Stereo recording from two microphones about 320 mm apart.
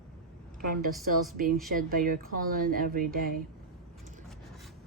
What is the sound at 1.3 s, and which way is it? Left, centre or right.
Speech, right.